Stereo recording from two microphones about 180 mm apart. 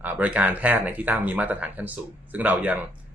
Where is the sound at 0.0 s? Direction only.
10° right (ahead or behind).